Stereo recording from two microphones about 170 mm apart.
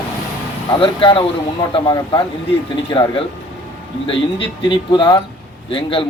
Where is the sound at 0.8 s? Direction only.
30° left (ahead or behind).